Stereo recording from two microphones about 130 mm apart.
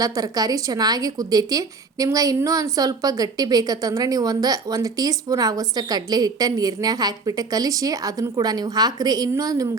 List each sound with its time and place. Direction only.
0.0 s a woman's voice: 30° right (ahead or behind)